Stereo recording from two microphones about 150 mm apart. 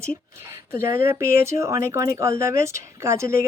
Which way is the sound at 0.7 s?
15° right (ahead or behind).